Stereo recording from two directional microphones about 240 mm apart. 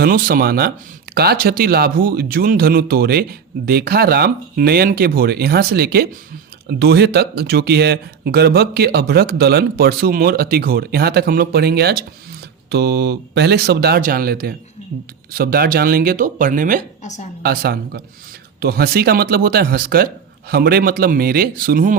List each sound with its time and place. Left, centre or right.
0.0 s speech: right
17.0 s a woman's voice: left
17.4 s speech: right